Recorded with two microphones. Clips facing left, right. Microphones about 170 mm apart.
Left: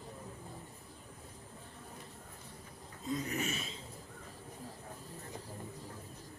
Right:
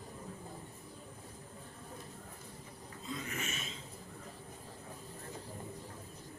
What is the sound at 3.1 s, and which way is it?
Throat clearing, 40° left (ahead or behind).